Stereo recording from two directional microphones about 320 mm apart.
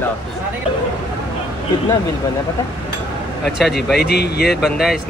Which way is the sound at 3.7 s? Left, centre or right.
Left.